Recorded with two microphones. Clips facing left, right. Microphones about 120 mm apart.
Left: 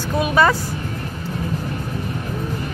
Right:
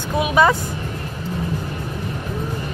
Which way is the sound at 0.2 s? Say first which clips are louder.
Right 1 dB; 15° right (ahead or behind).